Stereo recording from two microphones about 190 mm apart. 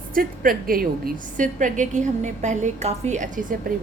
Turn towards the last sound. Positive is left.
turn(degrees=-45)  # may be behind; listen again after turning